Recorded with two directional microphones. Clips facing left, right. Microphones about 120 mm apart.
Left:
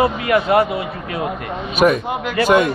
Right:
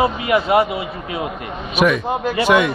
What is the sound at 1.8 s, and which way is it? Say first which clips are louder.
Speech: left 1 dB; 40° left (ahead or behind).